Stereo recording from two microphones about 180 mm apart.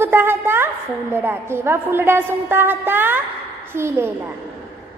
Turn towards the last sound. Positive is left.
turn(degrees=-10)  # may be behind; listen again after turning